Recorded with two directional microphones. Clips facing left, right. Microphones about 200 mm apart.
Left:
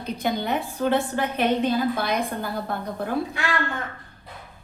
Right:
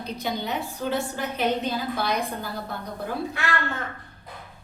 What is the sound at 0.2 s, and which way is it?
A woman's voice, 55° left (ahead or behind).